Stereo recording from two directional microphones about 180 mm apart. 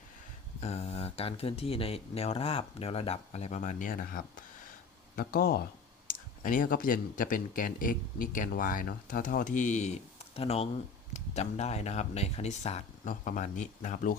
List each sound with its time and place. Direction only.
0.6 s speech: 35° left (ahead or behind)